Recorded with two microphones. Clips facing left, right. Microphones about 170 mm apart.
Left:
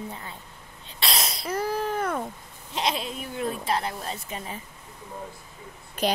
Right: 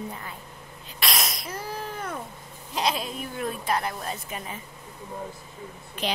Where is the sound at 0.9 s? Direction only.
30° left (ahead or behind).